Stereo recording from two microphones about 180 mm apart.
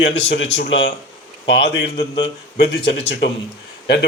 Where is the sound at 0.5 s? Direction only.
90° left.